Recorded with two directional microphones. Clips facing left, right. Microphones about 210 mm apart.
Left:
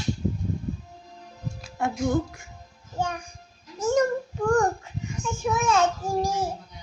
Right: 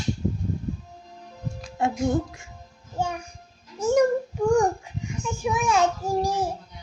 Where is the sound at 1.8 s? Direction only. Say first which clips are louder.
Right 1 dB; 25° right (ahead or behind).